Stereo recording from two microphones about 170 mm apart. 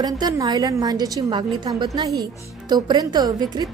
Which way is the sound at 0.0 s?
20° right (ahead or behind).